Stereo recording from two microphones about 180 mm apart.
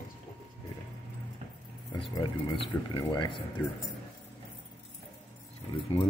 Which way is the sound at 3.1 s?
25° left (ahead or behind).